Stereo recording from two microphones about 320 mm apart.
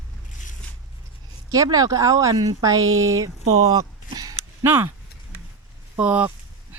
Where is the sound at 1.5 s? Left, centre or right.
Centre.